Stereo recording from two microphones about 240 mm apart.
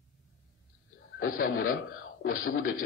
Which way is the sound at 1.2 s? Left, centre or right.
Left.